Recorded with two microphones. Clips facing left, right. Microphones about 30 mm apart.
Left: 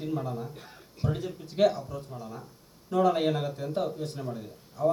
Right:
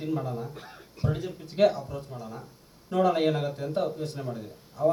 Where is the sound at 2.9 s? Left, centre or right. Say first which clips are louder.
Even; right.